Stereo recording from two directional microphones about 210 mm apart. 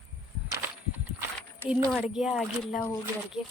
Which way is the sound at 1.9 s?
Centre (ahead or behind).